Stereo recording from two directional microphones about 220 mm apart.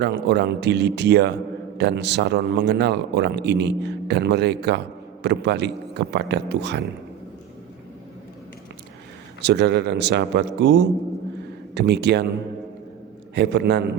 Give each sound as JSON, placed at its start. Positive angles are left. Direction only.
{"t": 0.0, "sound": "speech", "side_deg": -50}
{"t": 9.4, "sound": "speech", "side_deg": -50}
{"t": 13.3, "sound": "speech", "side_deg": -50}